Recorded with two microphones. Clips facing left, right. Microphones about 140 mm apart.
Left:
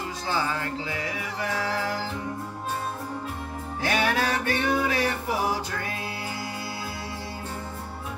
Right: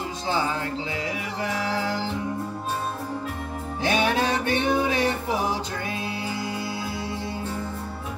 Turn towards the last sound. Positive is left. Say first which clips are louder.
# right 4 dB
turn(degrees=-20)  # may be behind; listen again after turning